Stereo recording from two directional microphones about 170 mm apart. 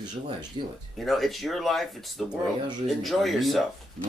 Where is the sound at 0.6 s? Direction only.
30° right (ahead or behind).